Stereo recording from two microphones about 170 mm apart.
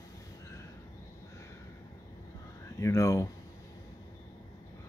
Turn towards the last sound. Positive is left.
turn(degrees=15)  # may be behind; listen again after turning